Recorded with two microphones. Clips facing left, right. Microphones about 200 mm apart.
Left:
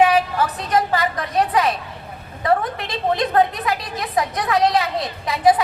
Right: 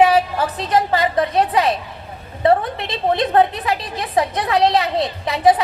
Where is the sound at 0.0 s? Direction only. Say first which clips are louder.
Right 2 dB; 30° right (ahead or behind).